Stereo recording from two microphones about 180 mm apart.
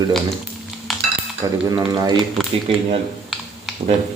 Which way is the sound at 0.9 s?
Centre (ahead or behind).